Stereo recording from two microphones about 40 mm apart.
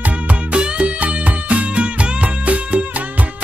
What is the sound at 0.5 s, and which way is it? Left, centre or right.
Music, right.